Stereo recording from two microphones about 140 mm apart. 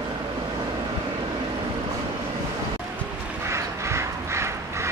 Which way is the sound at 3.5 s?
20° right (ahead or behind).